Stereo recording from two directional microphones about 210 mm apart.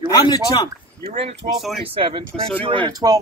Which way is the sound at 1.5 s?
Centre (ahead or behind).